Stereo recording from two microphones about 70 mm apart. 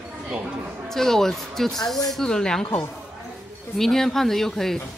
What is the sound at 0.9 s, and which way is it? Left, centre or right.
Speech, centre.